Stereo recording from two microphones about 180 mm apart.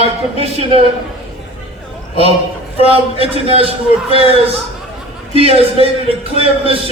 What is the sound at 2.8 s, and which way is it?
A man's voice, 30° right (ahead or behind).